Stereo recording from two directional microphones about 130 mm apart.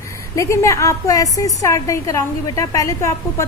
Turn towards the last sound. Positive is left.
turn(degrees=25)  # may be behind; listen again after turning